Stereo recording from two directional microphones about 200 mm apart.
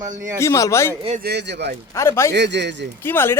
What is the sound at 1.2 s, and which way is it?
Speech, 55° right (ahead or behind).